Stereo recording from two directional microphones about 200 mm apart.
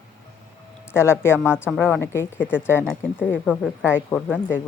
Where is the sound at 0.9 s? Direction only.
15° left (ahead or behind).